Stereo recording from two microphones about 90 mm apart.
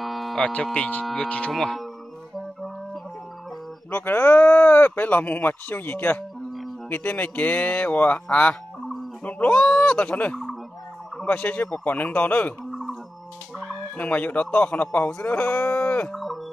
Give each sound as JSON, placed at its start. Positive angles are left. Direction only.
{"t": 0.0, "sound": "a sound", "side_deg": 0}
{"t": 0.7, "sound": "speech", "side_deg": 15}
{"t": 1.0, "sound": "speech", "side_deg": 5}
{"t": 3.9, "sound": "speech", "side_deg": 20}
{"t": 13.6, "sound": "speech", "side_deg": 10}